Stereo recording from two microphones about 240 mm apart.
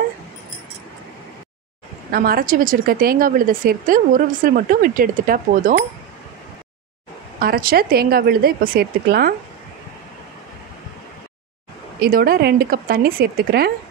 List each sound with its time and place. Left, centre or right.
2.0 s speech: right
7.3 s speech: right
12.0 s speech: right